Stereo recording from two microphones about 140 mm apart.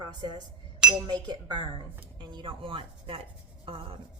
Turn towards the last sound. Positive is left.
turn(degrees=-40)  # may be behind; listen again after turning